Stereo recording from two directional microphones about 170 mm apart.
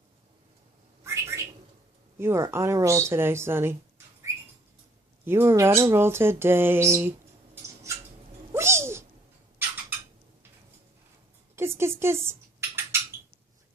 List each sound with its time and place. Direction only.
1.0 s bird: 15° right (ahead or behind)
2.1 s speech: 15° right (ahead or behind)
5.2 s speech: 15° right (ahead or behind)
7.5 s a sound: 15° right (ahead or behind)
11.5 s dishes: 15° right (ahead or behind)